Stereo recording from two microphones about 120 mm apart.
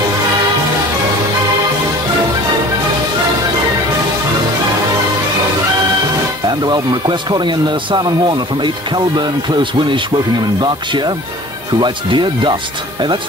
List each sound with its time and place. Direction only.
6.6 s speech: 40° right (ahead or behind)